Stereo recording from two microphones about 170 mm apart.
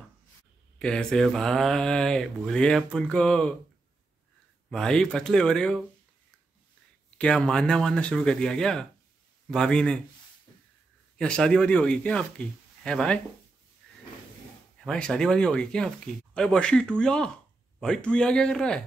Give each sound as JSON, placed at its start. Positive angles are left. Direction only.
{"t": 0.7, "sound": "mantra", "side_deg": 5}
{"t": 4.6, "sound": "mantra", "side_deg": 5}
{"t": 7.2, "sound": "mantra", "side_deg": 5}
{"t": 11.1, "sound": "mantra", "side_deg": 5}
{"t": 14.9, "sound": "mantra", "side_deg": 5}